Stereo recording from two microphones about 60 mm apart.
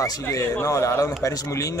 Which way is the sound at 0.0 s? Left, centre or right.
Left.